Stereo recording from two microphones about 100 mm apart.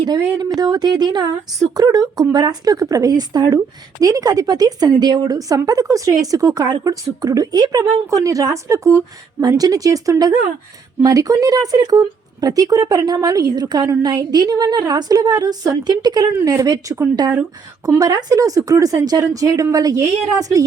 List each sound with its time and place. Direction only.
0.0 s a woman's voice: 45° right (ahead or behind)